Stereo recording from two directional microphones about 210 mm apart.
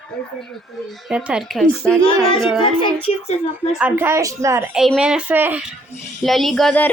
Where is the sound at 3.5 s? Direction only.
10° right (ahead or behind).